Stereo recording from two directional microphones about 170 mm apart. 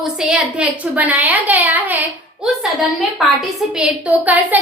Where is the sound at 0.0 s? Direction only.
5° right (ahead or behind).